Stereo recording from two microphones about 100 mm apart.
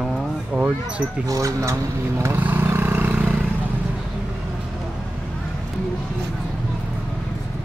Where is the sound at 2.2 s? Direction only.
20° right (ahead or behind).